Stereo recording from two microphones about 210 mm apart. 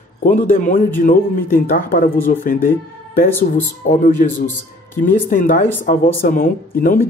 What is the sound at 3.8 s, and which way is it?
Speech, 35° left (ahead or behind).